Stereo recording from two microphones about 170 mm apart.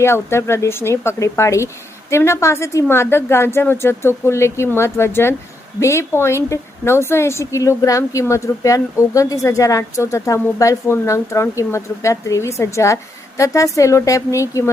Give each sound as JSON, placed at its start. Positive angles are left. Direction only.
{"t": 0.0, "sound": "a woman's voice", "side_deg": 15}